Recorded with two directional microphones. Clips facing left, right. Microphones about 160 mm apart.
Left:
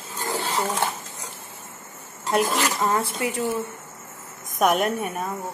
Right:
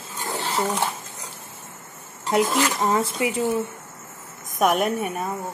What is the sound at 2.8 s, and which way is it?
Speech, 15° right (ahead or behind).